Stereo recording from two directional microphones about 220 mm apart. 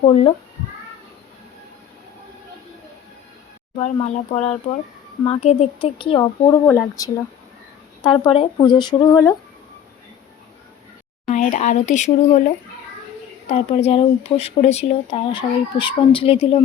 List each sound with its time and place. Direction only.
0.0 s speech: 25° left (ahead or behind)
3.8 s speech: 30° left (ahead or behind)
11.3 s speech: 35° left (ahead or behind)